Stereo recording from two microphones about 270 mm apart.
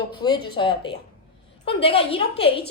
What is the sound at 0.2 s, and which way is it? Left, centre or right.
A woman's voice, centre.